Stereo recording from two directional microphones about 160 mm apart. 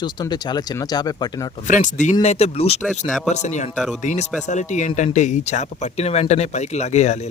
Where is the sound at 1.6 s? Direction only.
50° left (ahead or behind).